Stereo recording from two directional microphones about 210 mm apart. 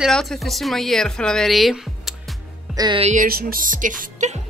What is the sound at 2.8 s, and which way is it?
Music, 25° right (ahead or behind).